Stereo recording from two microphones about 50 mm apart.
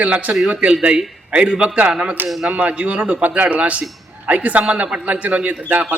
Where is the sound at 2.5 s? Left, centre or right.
Right.